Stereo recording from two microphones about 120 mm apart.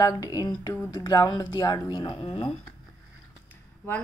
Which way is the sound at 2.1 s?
50° left (ahead or behind).